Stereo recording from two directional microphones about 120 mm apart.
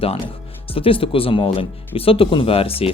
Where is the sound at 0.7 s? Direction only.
50° left (ahead or behind).